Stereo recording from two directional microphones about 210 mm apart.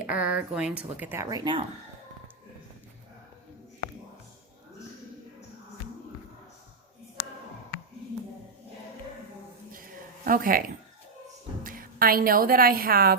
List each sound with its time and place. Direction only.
0.0 s speech: 5° right (ahead or behind)
9.7 s a sound: 40° right (ahead or behind)
11.6 s a woman's voice: 40° right (ahead or behind)